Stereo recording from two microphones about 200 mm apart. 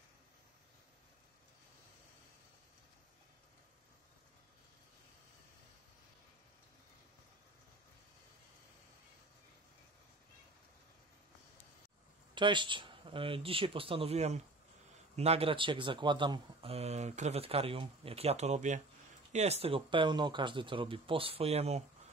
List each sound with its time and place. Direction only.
12.4 s speech: 25° right (ahead or behind)